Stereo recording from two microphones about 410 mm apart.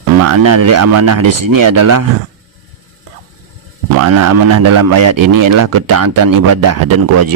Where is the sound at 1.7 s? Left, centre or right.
Right.